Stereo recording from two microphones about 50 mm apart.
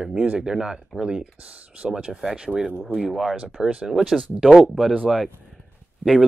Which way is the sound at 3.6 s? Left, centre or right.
Right.